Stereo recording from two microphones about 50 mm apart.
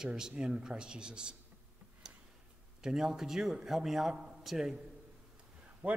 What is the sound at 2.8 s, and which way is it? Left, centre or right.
A man's voice, centre.